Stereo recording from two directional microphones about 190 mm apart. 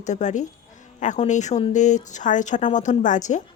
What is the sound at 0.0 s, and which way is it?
Speech, 40° left (ahead or behind).